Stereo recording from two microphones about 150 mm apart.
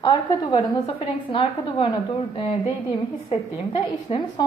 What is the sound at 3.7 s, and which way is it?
Speech, 30° left (ahead or behind).